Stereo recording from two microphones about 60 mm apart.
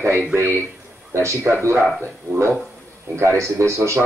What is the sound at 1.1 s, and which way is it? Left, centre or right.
Speech, right.